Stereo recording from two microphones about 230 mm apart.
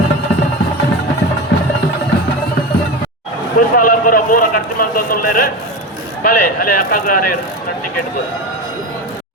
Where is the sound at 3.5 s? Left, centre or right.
Left.